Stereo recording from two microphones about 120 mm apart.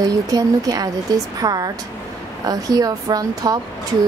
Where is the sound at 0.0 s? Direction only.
30° right (ahead or behind).